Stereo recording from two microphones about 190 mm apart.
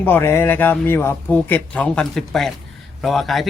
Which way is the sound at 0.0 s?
10° left (ahead or behind).